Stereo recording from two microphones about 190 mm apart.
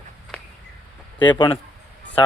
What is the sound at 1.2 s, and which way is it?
Speech, 25° left (ahead or behind).